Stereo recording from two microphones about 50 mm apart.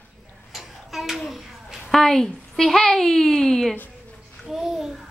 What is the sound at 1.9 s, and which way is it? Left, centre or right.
A woman's voice, centre.